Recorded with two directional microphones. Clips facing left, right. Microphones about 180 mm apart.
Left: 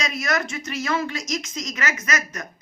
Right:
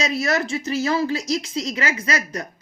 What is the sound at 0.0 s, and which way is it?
A woman's voice, 35° right (ahead or behind).